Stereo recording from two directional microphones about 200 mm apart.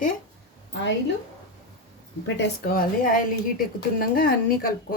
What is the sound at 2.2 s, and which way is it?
Speech, 60° left (ahead or behind).